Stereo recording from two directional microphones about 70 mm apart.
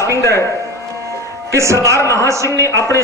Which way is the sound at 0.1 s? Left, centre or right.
Left.